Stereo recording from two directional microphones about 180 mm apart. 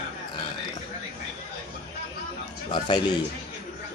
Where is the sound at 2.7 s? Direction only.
25° left (ahead or behind).